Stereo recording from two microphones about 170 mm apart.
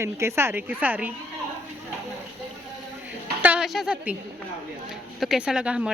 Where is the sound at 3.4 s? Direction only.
5° right (ahead or behind).